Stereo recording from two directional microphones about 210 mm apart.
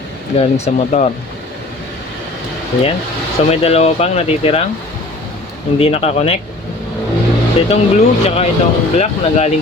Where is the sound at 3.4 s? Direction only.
30° left (ahead or behind).